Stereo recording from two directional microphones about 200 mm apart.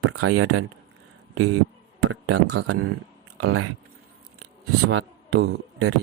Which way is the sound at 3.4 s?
90° right.